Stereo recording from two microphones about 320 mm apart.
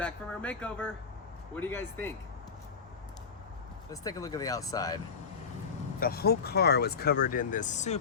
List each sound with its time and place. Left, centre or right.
0.0 s speech: centre
3.8 s speech: centre
6.0 s speech: left